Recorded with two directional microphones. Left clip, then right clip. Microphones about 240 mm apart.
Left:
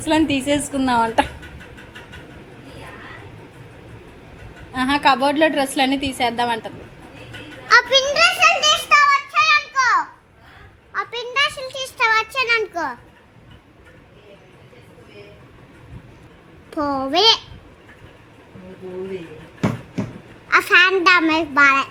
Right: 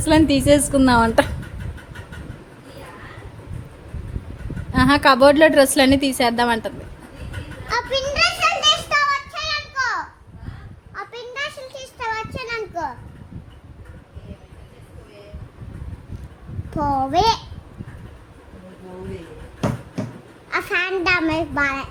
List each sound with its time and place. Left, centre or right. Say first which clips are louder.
0.0 s a woman's voice: right 3 dB; right
4.7 s a woman's voice: right 2 dB; right
7.9 s a sound: left 4 dB; centre
8.9 s a sound: left 5 dB; centre
16.8 s a child's voice: left 1 dB; centre
20.5 s a child's voice: left 8 dB; centre